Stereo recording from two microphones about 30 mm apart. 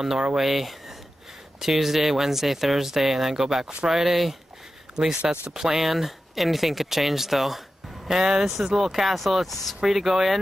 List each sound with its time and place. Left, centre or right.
0.4 s speech: centre
5.0 s speech: right
5.8 s speech: centre